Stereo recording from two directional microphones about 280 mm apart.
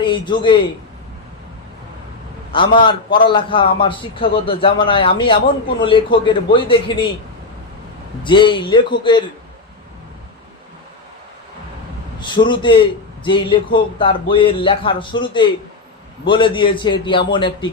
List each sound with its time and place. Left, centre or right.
0.0 s a man's voice: centre
2.5 s a man's voice: centre
8.2 s a man's voice: centre
12.2 s a man's voice: centre